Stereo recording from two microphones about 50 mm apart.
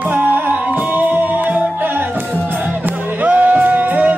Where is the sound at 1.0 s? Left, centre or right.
Right.